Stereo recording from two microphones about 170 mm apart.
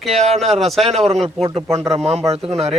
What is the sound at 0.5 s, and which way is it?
Speech, centre (ahead or behind).